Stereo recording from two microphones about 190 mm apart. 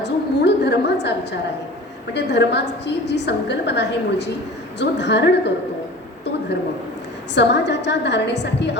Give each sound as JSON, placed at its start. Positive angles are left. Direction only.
{"t": 0.0, "sound": "a sound", "side_deg": 60}
{"t": 2.1, "sound": "a woman's voice", "side_deg": 65}
{"t": 7.3, "sound": "a woman's voice", "side_deg": 65}